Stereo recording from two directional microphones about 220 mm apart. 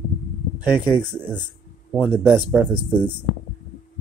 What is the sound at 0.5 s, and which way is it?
Speech, 5° right (ahead or behind).